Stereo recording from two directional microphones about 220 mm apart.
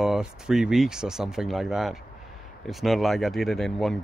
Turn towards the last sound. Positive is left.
turn(degrees=0)  # may be behind; listen again after turning